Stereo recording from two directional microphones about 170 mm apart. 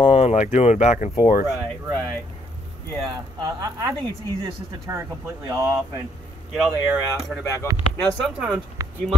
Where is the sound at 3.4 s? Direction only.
20° right (ahead or behind).